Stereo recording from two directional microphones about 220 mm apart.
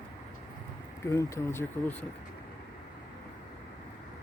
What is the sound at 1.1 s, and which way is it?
Speech, 15° left (ahead or behind).